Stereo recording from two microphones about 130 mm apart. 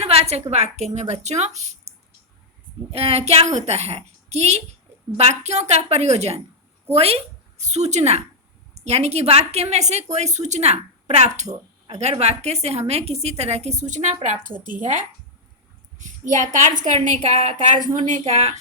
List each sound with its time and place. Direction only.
0.0 s a sound: 50° right (ahead or behind)
0.5 s a woman's voice: 55° right (ahead or behind)
2.9 s a woman's voice: 50° right (ahead or behind); by 14.5 s 70° right (ahead or behind)
14.7 s a woman's voice: 80° right; by 18.5 s 55° right (ahead or behind)